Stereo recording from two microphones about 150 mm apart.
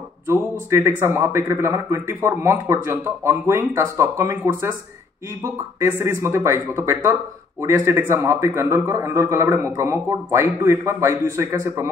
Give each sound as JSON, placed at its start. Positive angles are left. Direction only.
{"t": 0.3, "sound": "a man's voice", "side_deg": -20}